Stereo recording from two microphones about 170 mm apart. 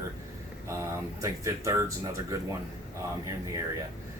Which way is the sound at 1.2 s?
20° right (ahead or behind).